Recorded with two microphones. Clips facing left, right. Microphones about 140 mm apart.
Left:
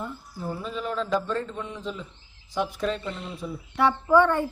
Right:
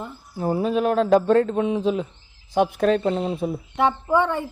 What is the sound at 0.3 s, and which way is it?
A man's voice, 65° right (ahead or behind).